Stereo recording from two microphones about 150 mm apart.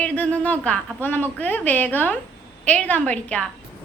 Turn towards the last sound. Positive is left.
turn(degrees=10)  # may be behind; listen again after turning